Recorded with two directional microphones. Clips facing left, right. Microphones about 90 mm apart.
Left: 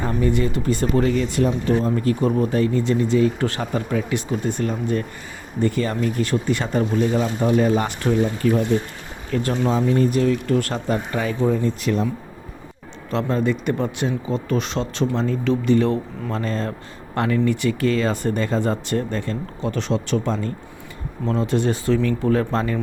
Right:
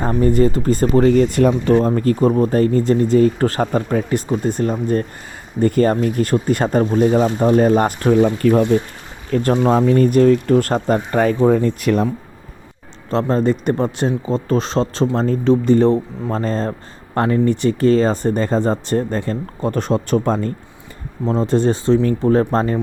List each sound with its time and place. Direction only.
0.0 s speech: 40° right (ahead or behind); by 1.8 s 60° right (ahead or behind)
1.8 s speech: 45° right (ahead or behind)
8.2 s speech: 55° right (ahead or behind)
9.3 s speech: 45° right (ahead or behind)
13.1 s speech: 35° right (ahead or behind)
21.2 s speech: 35° right (ahead or behind)